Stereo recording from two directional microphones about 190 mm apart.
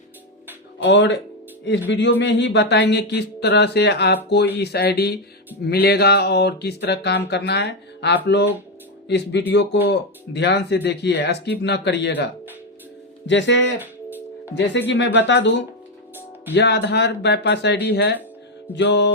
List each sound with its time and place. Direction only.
0.8 s speech: 65° left (ahead or behind)
13.7 s music: 10° right (ahead or behind)
14.8 s speech: 70° left (ahead or behind)